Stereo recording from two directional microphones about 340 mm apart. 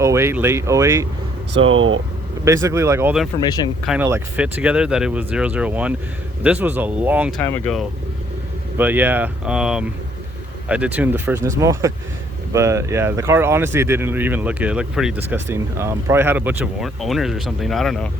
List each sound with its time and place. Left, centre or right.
0.0 s speech: centre
1.6 s speech: right
2.4 s speech: centre